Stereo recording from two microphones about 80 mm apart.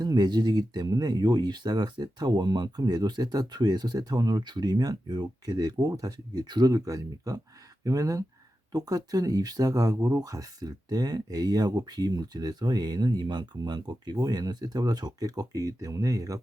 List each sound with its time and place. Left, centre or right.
0.0 s speech: right